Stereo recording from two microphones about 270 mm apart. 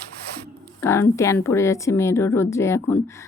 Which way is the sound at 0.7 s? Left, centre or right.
Centre.